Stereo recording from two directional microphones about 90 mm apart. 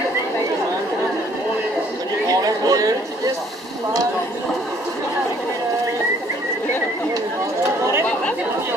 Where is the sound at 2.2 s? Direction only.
45° right (ahead or behind).